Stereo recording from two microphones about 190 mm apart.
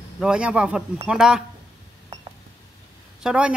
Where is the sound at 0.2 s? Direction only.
5° right (ahead or behind).